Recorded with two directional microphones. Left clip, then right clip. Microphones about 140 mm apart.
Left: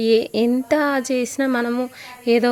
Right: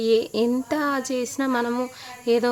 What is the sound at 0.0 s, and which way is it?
Speech, 20° left (ahead or behind).